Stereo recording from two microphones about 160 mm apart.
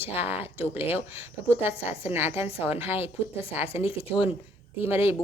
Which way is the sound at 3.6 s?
35° left (ahead or behind).